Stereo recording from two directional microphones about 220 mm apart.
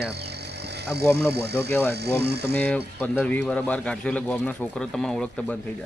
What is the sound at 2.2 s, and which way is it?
Speech, 50° right (ahead or behind).